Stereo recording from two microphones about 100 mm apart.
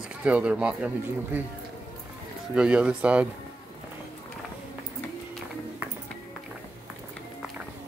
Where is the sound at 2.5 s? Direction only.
10° right (ahead or behind).